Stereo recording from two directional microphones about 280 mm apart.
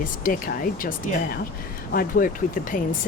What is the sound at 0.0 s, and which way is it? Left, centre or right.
Speech, left.